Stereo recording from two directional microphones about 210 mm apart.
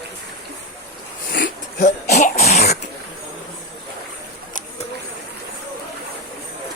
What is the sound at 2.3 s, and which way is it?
Throat clearing, 30° left (ahead or behind).